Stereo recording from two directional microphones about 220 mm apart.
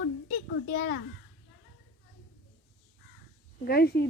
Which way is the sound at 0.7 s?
45° left (ahead or behind).